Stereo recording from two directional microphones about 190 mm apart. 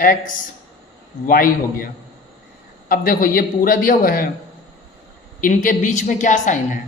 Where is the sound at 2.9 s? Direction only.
45° left (ahead or behind).